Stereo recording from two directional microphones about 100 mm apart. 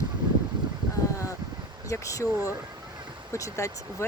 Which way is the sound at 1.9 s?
30° left (ahead or behind).